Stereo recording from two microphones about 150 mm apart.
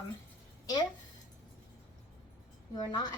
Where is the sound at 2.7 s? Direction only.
25° left (ahead or behind).